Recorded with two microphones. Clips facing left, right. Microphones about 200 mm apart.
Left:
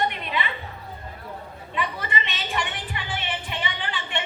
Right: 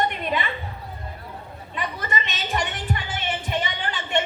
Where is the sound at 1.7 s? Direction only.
45° right (ahead or behind).